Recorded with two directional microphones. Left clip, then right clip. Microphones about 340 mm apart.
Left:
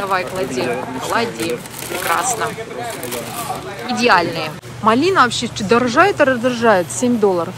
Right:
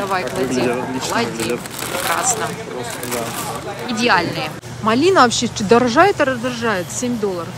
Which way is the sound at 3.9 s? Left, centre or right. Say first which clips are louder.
Left 3 dB; centre.